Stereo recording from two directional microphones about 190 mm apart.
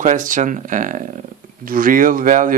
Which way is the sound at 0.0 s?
45° right (ahead or behind).